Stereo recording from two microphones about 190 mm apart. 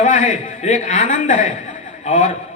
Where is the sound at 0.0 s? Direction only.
40° left (ahead or behind).